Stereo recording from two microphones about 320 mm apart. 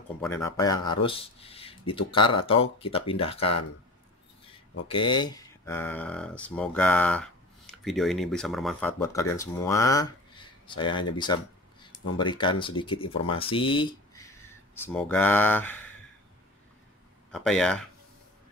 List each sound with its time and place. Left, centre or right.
0.2 s speech: centre
4.8 s speech: centre
17.3 s speech: centre